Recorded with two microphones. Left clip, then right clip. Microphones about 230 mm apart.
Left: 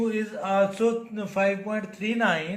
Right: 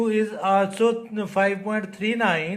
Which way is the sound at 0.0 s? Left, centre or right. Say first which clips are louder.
Right 6 dB; right.